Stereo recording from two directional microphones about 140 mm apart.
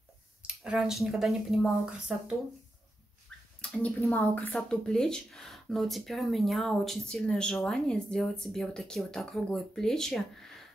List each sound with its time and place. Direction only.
0.4 s speech: 5° right (ahead or behind)
3.8 s speech: 15° left (ahead or behind)